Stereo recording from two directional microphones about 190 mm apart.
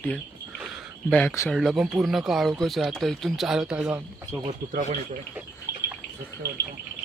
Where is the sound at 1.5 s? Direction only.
Centre (ahead or behind).